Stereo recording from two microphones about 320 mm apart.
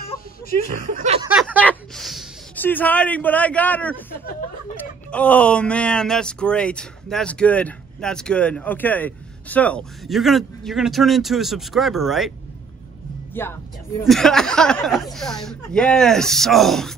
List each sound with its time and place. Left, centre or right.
0.7 s speech: centre
1.3 s speech: centre
13.3 s speech: centre